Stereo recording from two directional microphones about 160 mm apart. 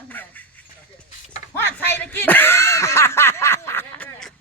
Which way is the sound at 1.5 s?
10° left (ahead or behind).